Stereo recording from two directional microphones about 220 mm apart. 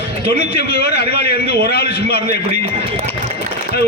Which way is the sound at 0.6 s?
45° left (ahead or behind).